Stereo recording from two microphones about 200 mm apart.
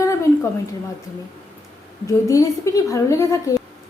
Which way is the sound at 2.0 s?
15° left (ahead or behind).